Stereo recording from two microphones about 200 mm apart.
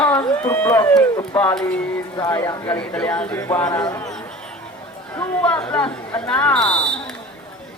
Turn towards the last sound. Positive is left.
turn(degrees=5)  # may be behind; listen again after turning